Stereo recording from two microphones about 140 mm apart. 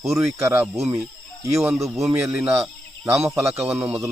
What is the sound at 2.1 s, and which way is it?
Speech, 15° right (ahead or behind).